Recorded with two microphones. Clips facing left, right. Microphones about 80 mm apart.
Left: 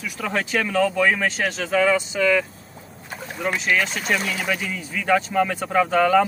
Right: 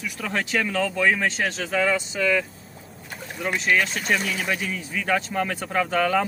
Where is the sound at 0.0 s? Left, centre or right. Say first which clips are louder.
Left 2 dB; centre.